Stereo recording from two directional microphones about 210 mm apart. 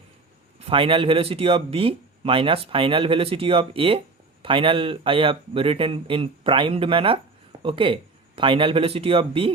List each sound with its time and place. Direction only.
0.6 s speech: 25° right (ahead or behind)